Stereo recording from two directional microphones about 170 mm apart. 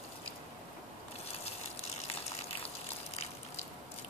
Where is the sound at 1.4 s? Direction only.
40° left (ahead or behind).